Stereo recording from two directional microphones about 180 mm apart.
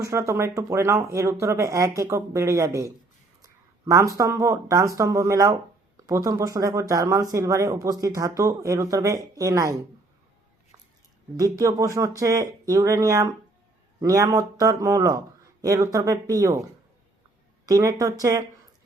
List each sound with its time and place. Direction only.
0.0 s speech: 15° right (ahead or behind)
3.4 s a sound: 20° right (ahead or behind)
4.2 s speech: 15° right (ahead or behind)
11.3 s speech: 20° right (ahead or behind)
17.7 s speech: 20° right (ahead or behind)